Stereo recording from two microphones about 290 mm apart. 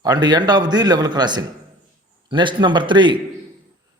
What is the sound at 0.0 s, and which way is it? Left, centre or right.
A man's voice, centre.